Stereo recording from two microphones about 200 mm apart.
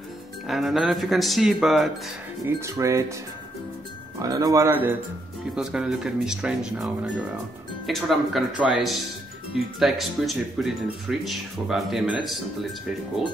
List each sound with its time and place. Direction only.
0.5 s speech: centre (ahead or behind)
2.4 s a man's voice: 15° right (ahead or behind)
4.2 s a man's voice: 20° right (ahead or behind)
5.6 s speech: 5° right (ahead or behind)